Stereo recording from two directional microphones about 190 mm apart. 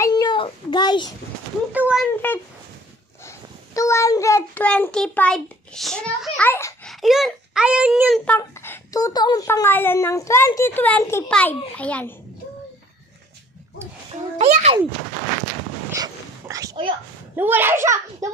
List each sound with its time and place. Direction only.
0.0 s a sound: 20° left (ahead or behind)
1.7 s a child's voice: 5° right (ahead or behind)
3.3 s a child's voice: 15° left (ahead or behind)
6.9 s a child's voice: centre (ahead or behind)
8.3 s a woman's voice: 15° left (ahead or behind)
14.4 s speech: 35° right (ahead or behind)
15.9 s dog: 15° right (ahead or behind)
17.4 s a child's voice: 10° right (ahead or behind)